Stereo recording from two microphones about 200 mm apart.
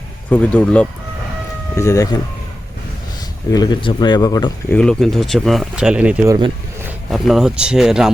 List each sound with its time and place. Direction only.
0.3 s speech: 5° left (ahead or behind)
3.5 s speech: 20° left (ahead or behind)
4.7 s speech: 5° left (ahead or behind)